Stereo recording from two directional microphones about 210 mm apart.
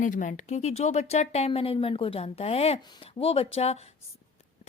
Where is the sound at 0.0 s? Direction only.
40° left (ahead or behind).